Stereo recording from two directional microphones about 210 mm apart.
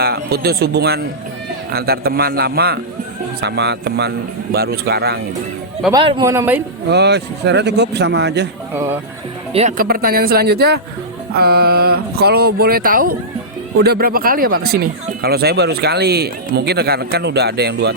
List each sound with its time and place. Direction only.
0.0 s speech: 50° right (ahead or behind)
5.9 s speech: 20° right (ahead or behind)
6.9 s speech: 55° right (ahead or behind)
8.7 s speech: 10° right (ahead or behind)
9.5 s speech: 30° right (ahead or behind)
9.7 s speech: 45° right (ahead or behind)